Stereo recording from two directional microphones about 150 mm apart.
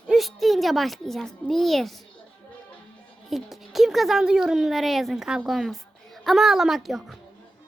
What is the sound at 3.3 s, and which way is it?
A woman's voice, centre (ahead or behind).